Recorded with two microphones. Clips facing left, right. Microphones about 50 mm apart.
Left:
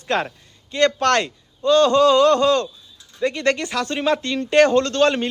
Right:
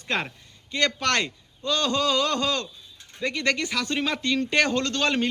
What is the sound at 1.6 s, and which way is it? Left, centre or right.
A man's voice, left.